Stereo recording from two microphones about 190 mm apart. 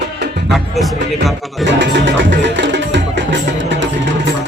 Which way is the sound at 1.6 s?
70° right (ahead or behind).